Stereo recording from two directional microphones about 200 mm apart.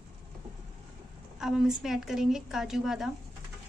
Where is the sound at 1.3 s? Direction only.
5° right (ahead or behind).